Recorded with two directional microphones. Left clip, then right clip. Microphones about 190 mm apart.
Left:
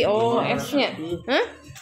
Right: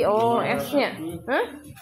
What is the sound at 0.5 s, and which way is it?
Speech, centre (ahead or behind).